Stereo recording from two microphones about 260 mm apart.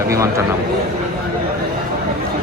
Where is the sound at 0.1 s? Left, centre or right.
Centre.